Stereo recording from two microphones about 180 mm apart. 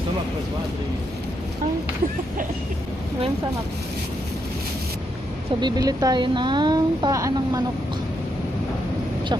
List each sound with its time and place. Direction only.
5.6 s speech: 20° right (ahead or behind)